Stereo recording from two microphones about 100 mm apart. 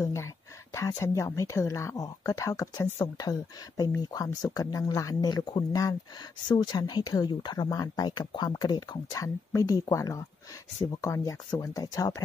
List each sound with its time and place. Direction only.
0.0 s speech: 30° left (ahead or behind)